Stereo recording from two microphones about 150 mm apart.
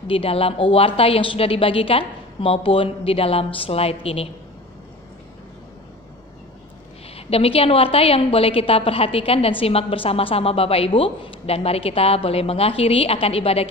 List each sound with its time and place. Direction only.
0.0 s a woman's voice: 40° left (ahead or behind)
7.2 s a woman's voice: 40° left (ahead or behind)